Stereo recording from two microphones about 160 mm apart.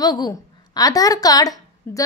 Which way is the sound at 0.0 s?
25° left (ahead or behind).